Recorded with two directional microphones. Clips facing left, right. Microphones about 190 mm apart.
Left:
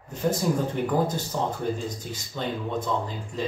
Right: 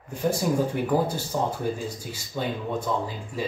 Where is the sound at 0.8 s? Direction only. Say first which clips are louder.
Right 1 dB; 10° right (ahead or behind).